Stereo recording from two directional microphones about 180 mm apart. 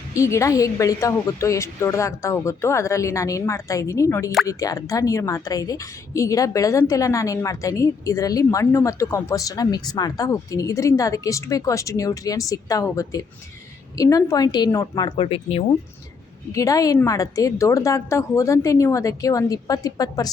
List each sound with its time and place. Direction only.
0.1 s a woman's voice: 15° left (ahead or behind); by 15.6 s 35° left (ahead or behind)
16.5 s speech: 20° left (ahead or behind)